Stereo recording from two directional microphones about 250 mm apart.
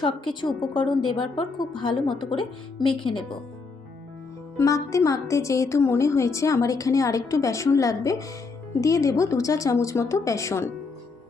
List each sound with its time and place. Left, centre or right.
0.0 s speech: centre
4.5 s a woman's voice: centre